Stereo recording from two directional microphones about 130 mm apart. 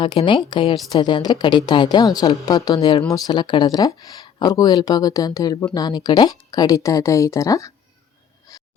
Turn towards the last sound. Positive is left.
turn(degrees=25)  # may be behind; listen again after turning